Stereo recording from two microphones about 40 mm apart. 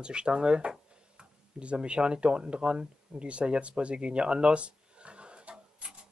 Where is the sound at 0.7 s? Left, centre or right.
Right.